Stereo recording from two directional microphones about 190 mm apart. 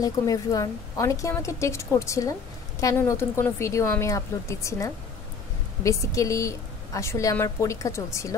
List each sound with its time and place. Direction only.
0.0 s a woman's voice: 20° left (ahead or behind)